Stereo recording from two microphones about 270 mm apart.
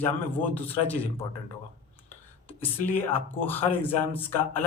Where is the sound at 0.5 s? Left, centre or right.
Centre.